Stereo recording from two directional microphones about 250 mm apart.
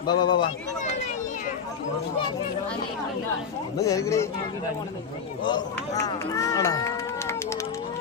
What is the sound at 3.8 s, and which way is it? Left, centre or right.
Speech, centre.